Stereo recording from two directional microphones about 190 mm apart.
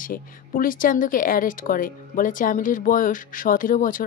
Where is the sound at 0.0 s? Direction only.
45° left (ahead or behind).